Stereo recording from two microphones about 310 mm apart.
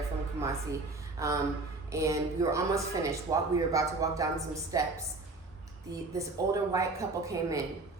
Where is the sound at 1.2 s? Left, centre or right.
Centre.